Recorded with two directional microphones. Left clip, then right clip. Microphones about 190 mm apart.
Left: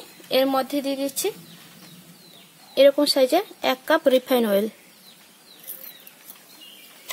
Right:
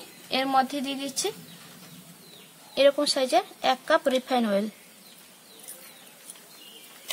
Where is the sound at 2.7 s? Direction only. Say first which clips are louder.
Left 5 dB; 40° left (ahead or behind).